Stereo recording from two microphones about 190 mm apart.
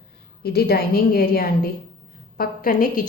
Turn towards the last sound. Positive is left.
turn(degrees=50)  # may be behind; listen again after turning